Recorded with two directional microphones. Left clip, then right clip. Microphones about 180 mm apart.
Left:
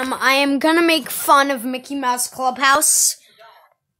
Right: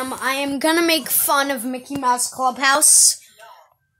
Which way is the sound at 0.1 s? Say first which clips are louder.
Left 9 dB; 20° left (ahead or behind).